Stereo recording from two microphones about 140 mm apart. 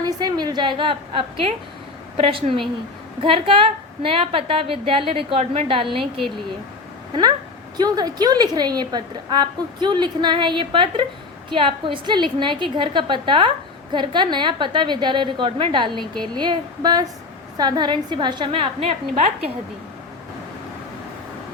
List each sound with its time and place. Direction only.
0.0 s a woman's voice: 30° right (ahead or behind)